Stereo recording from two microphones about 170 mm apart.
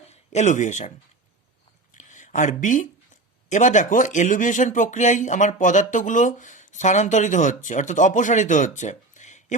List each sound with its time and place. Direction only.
0.1 s speech: 45° left (ahead or behind)
1.9 s a sound: 45° left (ahead or behind)
3.5 s speech: 45° left (ahead or behind)